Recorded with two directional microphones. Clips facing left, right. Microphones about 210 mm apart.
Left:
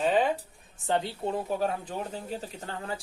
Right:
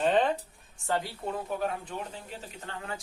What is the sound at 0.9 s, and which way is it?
Speech, 25° left (ahead or behind).